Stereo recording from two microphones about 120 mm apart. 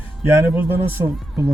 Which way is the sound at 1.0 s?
30° right (ahead or behind).